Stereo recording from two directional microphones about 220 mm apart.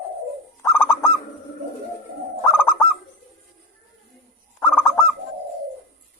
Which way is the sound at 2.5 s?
10° left (ahead or behind).